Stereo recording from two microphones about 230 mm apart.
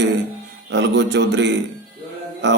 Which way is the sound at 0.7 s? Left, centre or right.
Right.